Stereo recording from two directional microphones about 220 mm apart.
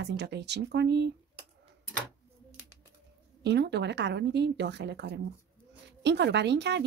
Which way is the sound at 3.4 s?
50° right (ahead or behind).